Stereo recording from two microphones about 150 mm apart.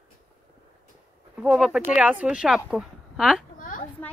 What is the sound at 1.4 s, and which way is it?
A woman's voice, 5° right (ahead or behind).